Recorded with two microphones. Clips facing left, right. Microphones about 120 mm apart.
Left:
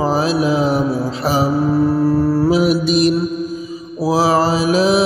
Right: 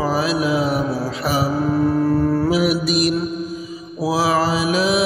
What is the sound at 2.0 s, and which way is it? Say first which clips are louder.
Mantra: left 3 dB; 10° left (ahead or behind).